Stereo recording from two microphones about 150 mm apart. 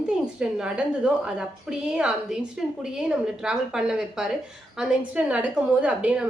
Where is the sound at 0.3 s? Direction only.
5° right (ahead or behind).